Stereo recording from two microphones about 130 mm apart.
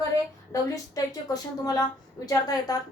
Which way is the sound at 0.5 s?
30° left (ahead or behind).